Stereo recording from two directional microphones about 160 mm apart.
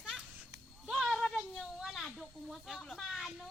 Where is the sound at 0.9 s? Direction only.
Centre (ahead or behind).